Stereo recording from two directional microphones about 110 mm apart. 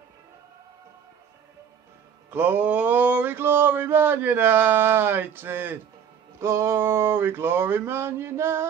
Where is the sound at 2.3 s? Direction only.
20° right (ahead or behind).